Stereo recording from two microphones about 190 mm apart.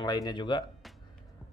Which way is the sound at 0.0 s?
20° left (ahead or behind).